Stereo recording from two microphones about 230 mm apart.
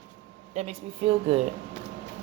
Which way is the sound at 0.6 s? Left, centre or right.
Right.